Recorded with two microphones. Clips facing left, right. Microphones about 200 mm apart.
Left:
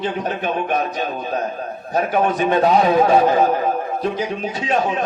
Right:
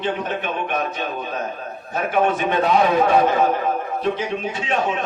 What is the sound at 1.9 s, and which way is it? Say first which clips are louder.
A man's voice: left 1 dB; 40° left (ahead or behind).